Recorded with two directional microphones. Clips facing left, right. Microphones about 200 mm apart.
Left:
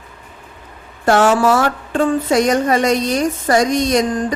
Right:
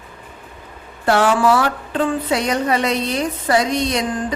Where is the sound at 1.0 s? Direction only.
45° left (ahead or behind).